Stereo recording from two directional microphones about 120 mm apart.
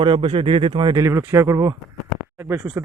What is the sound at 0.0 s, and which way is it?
Speech, 45° right (ahead or behind).